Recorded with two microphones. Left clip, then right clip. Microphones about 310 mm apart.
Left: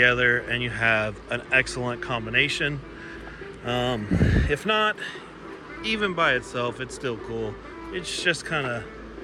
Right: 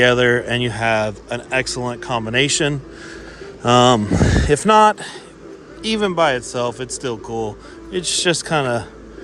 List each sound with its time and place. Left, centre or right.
0.0 s speech: centre
7.9 s speech: centre